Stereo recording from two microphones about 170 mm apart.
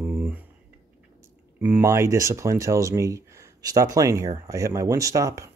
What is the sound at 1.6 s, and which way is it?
Speech, 10° right (ahead or behind).